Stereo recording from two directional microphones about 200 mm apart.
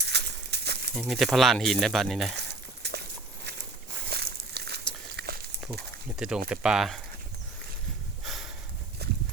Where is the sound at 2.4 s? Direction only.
55° right (ahead or behind).